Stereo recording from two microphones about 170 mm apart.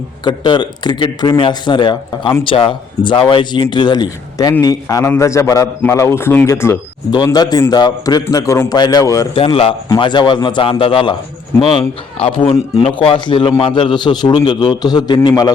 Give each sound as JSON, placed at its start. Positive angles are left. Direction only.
{"t": 0.3, "sound": "a man's voice", "side_deg": 25}
{"t": 9.3, "sound": "a man's voice", "side_deg": 30}